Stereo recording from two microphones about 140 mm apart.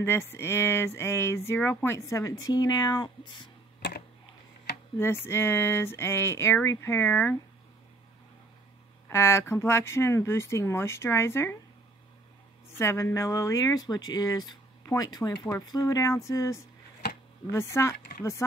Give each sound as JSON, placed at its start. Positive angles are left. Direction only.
{"t": 0.0, "sound": "speech", "side_deg": 15}
{"t": 4.9, "sound": "speech", "side_deg": 15}
{"t": 9.1, "sound": "speech", "side_deg": 20}
{"t": 12.7, "sound": "speech", "side_deg": 20}